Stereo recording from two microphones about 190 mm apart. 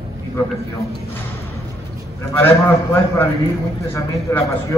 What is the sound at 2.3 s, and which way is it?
A man's voice, 10° left (ahead or behind).